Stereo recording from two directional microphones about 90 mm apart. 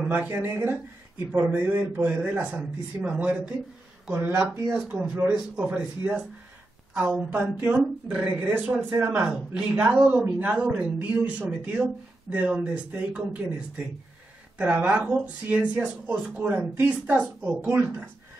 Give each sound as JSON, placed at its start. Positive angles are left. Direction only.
{"t": 0.1, "sound": "speech", "side_deg": -25}
{"t": 5.6, "sound": "speech", "side_deg": -15}